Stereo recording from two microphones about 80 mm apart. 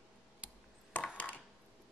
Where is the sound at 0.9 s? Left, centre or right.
Centre.